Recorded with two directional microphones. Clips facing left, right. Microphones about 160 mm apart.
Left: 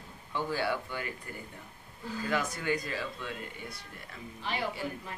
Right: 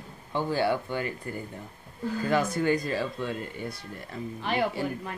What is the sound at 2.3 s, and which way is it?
A man's voice, 35° right (ahead or behind).